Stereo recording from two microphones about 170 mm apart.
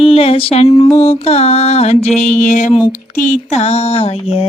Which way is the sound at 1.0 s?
35° left (ahead or behind).